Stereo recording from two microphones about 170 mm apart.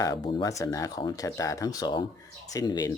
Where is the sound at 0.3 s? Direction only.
25° left (ahead or behind).